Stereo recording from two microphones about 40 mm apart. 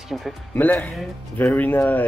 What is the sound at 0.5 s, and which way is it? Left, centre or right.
Speech, left.